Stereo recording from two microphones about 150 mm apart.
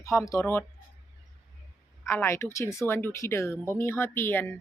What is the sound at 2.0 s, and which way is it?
A woman's voice, 15° left (ahead or behind).